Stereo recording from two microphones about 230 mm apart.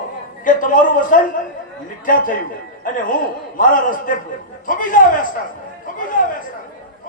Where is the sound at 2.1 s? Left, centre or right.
Left.